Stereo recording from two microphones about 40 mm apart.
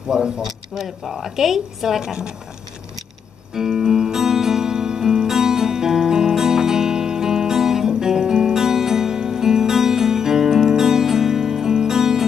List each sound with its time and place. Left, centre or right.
0.1 s speech: centre
0.7 s speech: centre
3.5 s music: centre